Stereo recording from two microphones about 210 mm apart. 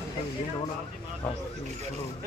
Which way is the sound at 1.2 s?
5° left (ahead or behind).